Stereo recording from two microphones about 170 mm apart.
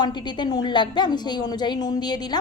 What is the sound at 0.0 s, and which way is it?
A woman's voice, 25° left (ahead or behind).